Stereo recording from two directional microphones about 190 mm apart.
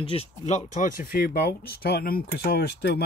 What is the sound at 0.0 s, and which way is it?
Speech, 30° left (ahead or behind).